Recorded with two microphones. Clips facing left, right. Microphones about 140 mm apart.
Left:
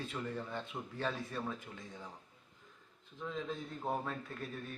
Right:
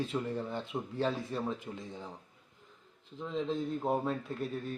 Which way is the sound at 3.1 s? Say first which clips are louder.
Right 7 dB; 30° right (ahead or behind).